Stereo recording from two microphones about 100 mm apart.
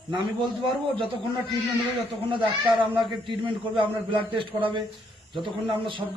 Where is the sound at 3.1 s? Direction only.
55° right (ahead or behind).